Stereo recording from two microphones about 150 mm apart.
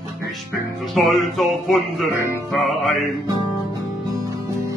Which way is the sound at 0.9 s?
Centre (ahead or behind).